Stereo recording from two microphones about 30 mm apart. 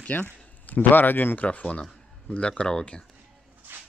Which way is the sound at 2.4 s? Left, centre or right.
Left.